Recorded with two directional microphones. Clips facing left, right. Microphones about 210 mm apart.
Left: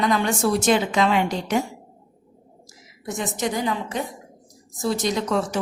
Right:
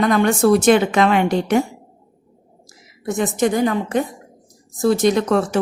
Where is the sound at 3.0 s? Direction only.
55° right (ahead or behind).